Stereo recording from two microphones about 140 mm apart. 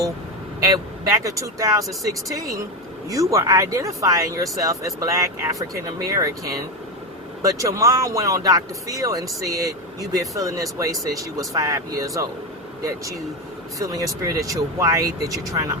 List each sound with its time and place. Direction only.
0.6 s speech: 25° right (ahead or behind)
7.4 s speech: 25° right (ahead or behind)
13.7 s speech: 25° right (ahead or behind)